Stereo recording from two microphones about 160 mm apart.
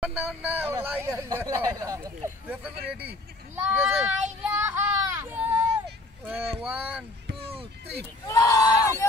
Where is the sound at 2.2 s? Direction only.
10° right (ahead or behind).